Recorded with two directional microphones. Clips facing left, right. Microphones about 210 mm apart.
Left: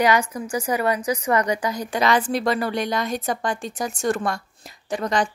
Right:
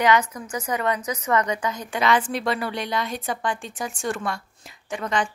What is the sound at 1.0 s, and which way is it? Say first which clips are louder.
A woman's voice: left 2 dB; 30° left (ahead or behind).